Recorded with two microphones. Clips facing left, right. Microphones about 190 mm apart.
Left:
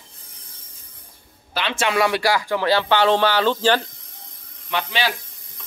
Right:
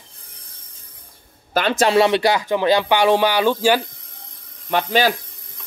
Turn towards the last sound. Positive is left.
turn(degrees=-45)  # may be behind; listen again after turning